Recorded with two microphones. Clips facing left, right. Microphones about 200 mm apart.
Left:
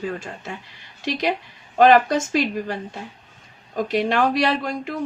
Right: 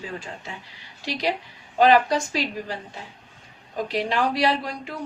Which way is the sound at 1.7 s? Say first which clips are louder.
Left 3 dB; 50° left (ahead or behind).